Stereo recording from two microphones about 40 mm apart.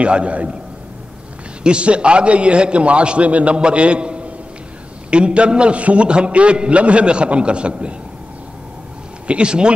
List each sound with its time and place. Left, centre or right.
0.0 s a man's voice: right
1.6 s a man's voice: right
9.3 s a man's voice: right